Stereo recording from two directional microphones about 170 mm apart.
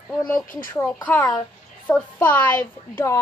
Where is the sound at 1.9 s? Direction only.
10° left (ahead or behind).